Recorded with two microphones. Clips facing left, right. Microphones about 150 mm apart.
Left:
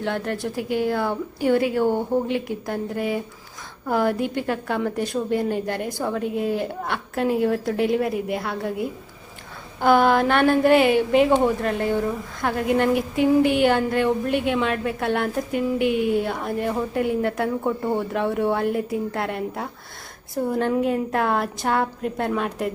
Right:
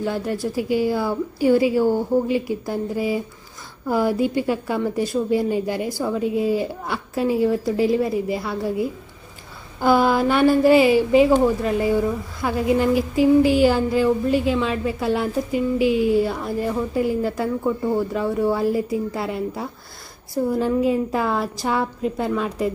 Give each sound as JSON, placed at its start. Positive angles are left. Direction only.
{"t": 0.0, "sound": "a woman's voice", "side_deg": -5}
{"t": 1.8, "sound": "speech", "side_deg": 20}
{"t": 2.2, "sound": "a woman's voice", "side_deg": -5}
{"t": 13.4, "sound": "speech", "side_deg": 60}
{"t": 13.7, "sound": "a woman's voice", "side_deg": -5}
{"t": 15.5, "sound": "speech", "side_deg": 60}
{"t": 16.0, "sound": "a woman's voice", "side_deg": 0}